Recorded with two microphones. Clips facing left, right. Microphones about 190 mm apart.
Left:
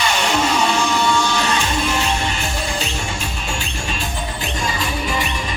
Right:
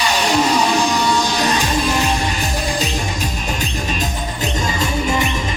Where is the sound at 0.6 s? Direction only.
35° right (ahead or behind).